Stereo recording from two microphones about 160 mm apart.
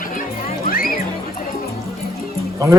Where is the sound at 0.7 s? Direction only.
60° left (ahead or behind).